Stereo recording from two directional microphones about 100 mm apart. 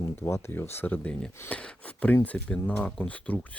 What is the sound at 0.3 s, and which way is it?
Speech, 25° left (ahead or behind).